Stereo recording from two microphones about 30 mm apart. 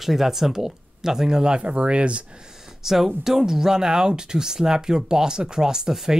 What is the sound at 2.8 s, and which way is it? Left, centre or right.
Speech, centre.